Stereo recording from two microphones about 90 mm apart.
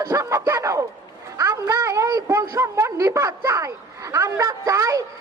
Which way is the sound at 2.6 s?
35° right (ahead or behind).